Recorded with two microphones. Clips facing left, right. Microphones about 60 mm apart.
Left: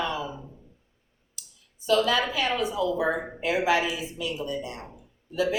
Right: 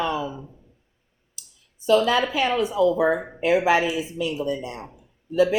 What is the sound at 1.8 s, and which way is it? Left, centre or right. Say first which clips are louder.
Speech: right 4 dB; right.